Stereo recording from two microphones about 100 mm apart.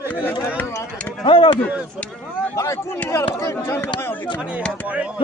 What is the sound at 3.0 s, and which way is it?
Speech, 30° left (ahead or behind).